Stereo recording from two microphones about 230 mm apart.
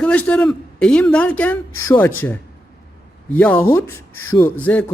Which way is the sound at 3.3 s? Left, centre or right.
Centre.